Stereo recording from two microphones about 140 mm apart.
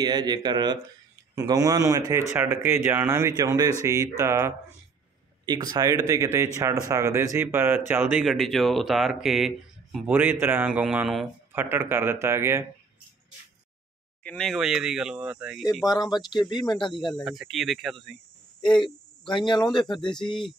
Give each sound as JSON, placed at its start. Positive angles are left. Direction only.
{"t": 0.0, "sound": "speech", "side_deg": -30}
{"t": 3.3, "sound": "speech", "side_deg": -30}
{"t": 5.4, "sound": "speech", "side_deg": -30}
{"t": 11.5, "sound": "speech", "side_deg": -15}
{"t": 14.2, "sound": "speech", "side_deg": 5}
{"t": 15.9, "sound": "speech", "side_deg": 30}
{"t": 17.1, "sound": "speech", "side_deg": 0}
{"t": 18.6, "sound": "speech", "side_deg": 35}
{"t": 20.1, "sound": "speech", "side_deg": 5}